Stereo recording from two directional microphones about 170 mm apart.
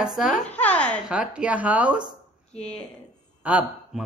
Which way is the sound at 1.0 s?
5° right (ahead or behind).